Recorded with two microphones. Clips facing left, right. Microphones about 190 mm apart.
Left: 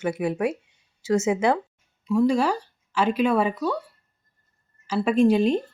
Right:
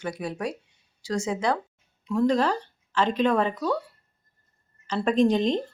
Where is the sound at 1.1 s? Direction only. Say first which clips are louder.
Left 5 dB; 10° left (ahead or behind).